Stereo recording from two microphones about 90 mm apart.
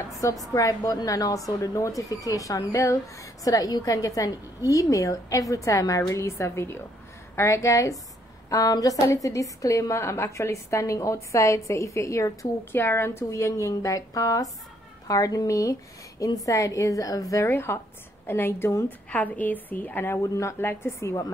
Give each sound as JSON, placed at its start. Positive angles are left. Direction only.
{"t": 0.1, "sound": "a woman's voice", "side_deg": 40}
{"t": 18.9, "sound": "a woman's voice", "side_deg": 15}